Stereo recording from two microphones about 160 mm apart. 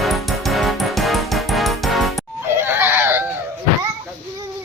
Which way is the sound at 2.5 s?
15° right (ahead or behind).